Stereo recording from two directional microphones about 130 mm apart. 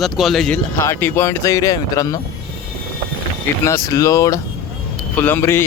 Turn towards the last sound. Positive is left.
turn(degrees=20)  # may be behind; listen again after turning